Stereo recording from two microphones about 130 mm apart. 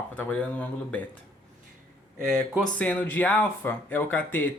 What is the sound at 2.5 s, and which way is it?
Speech, 10° left (ahead or behind).